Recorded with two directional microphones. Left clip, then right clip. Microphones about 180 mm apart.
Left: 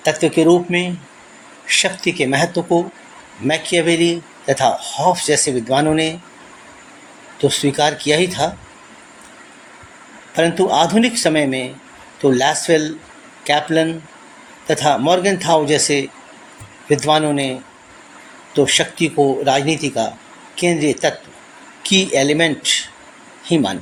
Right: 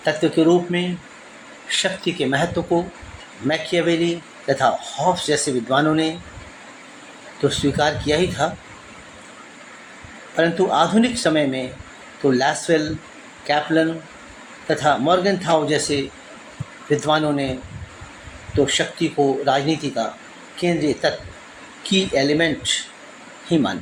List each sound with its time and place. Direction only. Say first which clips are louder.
0.0 s speech: left 3 dB; 30° left (ahead or behind)
7.4 s speech: left 3 dB; 30° left (ahead or behind)
10.3 s speech: left 3 dB; 30° left (ahead or behind)
14.7 s speech: left 3 dB; 30° left (ahead or behind)
17.1 s speech: left 4 dB; 35° left (ahead or behind)
18.6 s speech: left 4 dB; 30° left (ahead or behind)